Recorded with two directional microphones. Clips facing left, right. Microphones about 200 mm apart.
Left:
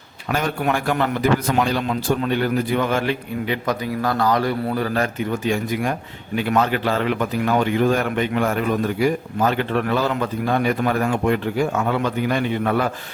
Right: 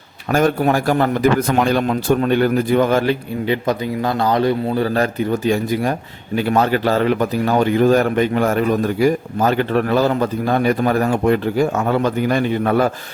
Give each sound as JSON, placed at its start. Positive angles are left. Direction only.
{"t": 0.3, "sound": "a man's voice", "side_deg": -45}